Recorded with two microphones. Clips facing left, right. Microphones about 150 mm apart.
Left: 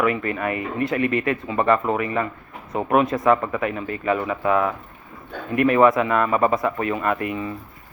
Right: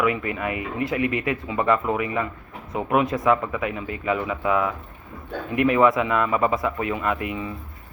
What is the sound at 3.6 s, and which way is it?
Speech, 15° right (ahead or behind).